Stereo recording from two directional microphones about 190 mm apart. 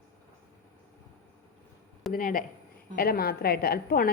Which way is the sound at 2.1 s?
45° left (ahead or behind).